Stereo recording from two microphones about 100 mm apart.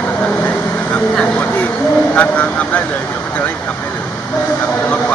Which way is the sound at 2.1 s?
15° left (ahead or behind).